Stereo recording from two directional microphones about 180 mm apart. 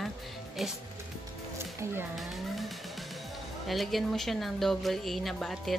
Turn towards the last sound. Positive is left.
turn(degrees=0)  # may be behind; listen again after turning